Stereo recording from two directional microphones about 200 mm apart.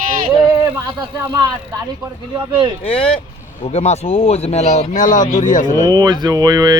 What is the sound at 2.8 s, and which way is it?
Speech, 30° left (ahead or behind).